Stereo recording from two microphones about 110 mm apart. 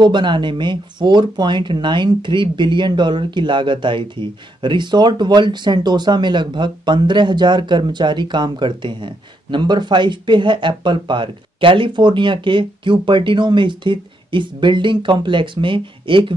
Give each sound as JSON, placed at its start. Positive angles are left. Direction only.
{"t": 0.0, "sound": "speech", "side_deg": -45}